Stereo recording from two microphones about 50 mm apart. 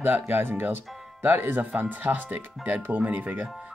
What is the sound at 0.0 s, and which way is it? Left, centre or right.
Speech, right.